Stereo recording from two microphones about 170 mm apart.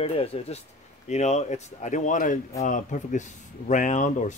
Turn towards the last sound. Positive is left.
turn(degrees=45)  # may be behind; listen again after turning